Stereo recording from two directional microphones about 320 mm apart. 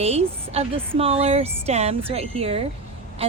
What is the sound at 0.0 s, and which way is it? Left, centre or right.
A woman's voice, centre.